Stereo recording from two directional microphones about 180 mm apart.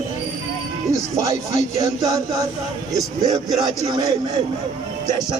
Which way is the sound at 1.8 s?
20° right (ahead or behind).